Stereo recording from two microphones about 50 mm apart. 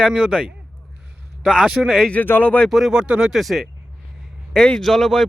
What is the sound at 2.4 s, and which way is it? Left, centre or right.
Speech, left.